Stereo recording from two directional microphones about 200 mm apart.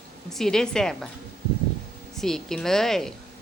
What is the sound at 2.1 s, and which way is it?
Speech, centre (ahead or behind).